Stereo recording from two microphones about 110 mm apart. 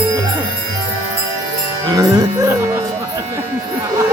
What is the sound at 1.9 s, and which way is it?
Speech, 35° right (ahead or behind).